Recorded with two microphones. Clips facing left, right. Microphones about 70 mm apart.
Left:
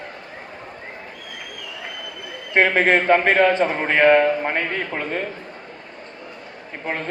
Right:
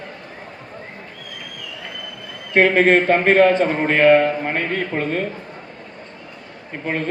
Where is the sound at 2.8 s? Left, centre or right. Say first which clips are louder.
Right 2 dB; left.